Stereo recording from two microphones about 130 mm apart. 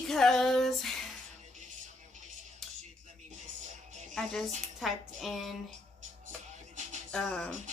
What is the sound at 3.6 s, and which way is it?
Music, 75° right (ahead or behind).